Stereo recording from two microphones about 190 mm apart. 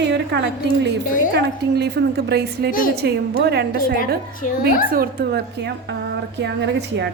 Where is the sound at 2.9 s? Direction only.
60° right (ahead or behind).